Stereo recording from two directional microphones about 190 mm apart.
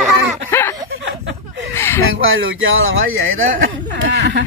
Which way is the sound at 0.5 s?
10° left (ahead or behind).